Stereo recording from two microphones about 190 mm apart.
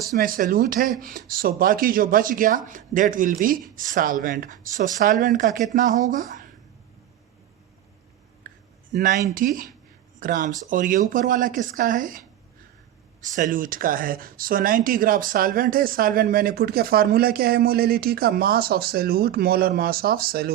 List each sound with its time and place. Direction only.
0.1 s speech: 45° right (ahead or behind)
8.4 s a sound: 45° right (ahead or behind)
8.9 s speech: 45° right (ahead or behind)
13.3 s speech: 45° right (ahead or behind)